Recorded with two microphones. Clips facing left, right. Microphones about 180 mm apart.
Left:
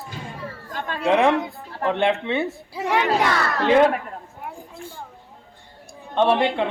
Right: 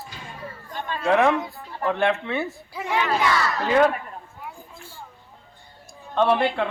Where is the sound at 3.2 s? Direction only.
60° left (ahead or behind).